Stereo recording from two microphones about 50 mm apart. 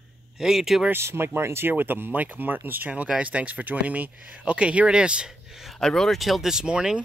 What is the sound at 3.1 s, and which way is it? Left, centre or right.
Speech, right.